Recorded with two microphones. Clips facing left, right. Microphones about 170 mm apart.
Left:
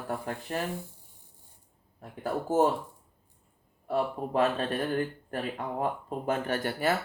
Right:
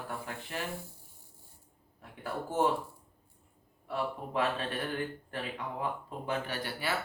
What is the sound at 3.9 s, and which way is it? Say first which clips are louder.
A man's voice: left 6 dB; 40° left (ahead or behind).